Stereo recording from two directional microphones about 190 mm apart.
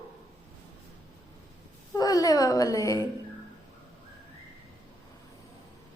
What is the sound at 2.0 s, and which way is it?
Speech, 20° left (ahead or behind).